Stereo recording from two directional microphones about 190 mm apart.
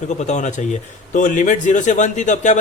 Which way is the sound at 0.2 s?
40° left (ahead or behind).